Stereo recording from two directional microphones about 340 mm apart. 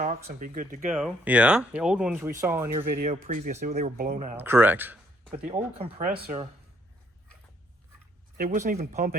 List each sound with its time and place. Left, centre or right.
0.0 s speech: right
0.9 s speech: centre
2.8 s speech: right
4.4 s speech: centre
5.5 s speech: centre
8.4 s speech: right